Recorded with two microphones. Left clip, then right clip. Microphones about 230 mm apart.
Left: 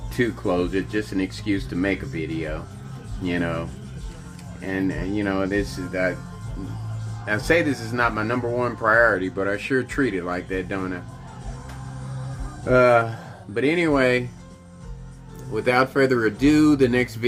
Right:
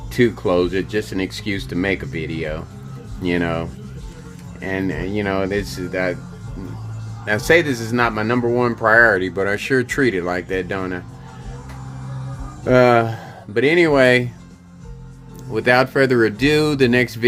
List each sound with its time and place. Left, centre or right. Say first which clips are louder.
0.1 s a man's voice: right 6 dB; right
7.3 s a man's voice: right 5 dB; right
12.6 s a man's voice: right 3 dB; right
15.5 s speech: right 4 dB; right